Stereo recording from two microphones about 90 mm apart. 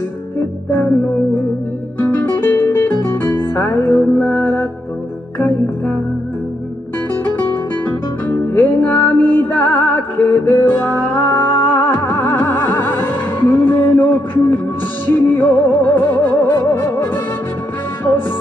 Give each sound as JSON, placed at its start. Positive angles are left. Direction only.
{"t": 2.0, "sound": "music", "side_deg": 20}
{"t": 8.3, "sound": "music", "side_deg": 20}